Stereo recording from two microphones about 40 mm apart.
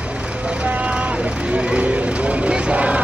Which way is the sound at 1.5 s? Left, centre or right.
Right.